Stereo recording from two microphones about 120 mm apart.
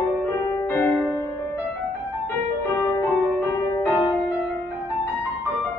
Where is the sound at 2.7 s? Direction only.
25° left (ahead or behind).